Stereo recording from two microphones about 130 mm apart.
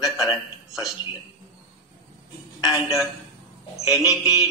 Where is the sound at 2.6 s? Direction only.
Centre (ahead or behind).